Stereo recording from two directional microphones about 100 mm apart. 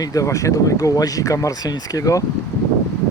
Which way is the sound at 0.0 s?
35° left (ahead or behind).